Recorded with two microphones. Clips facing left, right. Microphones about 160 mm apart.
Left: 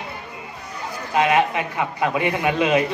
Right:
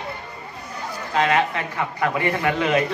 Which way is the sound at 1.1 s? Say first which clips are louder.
Left 2 dB; 15° left (ahead or behind).